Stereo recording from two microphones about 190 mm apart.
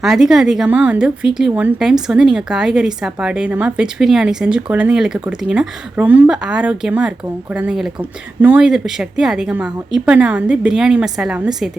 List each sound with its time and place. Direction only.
0.0 s a woman's voice: centre (ahead or behind)